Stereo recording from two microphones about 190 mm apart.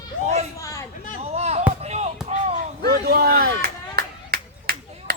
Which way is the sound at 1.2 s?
35° right (ahead or behind).